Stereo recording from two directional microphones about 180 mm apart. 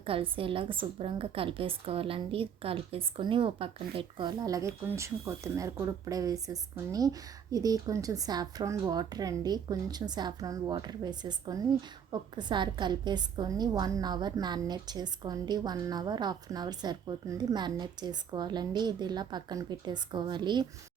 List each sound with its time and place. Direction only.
0.0 s a woman's voice: 30° right (ahead or behind)